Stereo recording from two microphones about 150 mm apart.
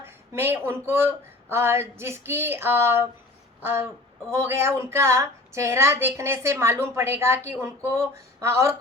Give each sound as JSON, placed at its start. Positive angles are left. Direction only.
{"t": 0.0, "sound": "a woman's voice", "side_deg": -15}